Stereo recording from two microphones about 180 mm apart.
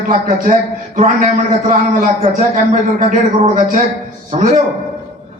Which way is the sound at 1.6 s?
45° right (ahead or behind).